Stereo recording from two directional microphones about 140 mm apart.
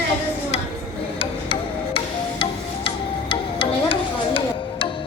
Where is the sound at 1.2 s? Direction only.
40° left (ahead or behind).